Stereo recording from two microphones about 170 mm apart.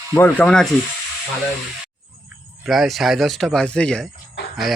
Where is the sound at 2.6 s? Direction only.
Centre (ahead or behind).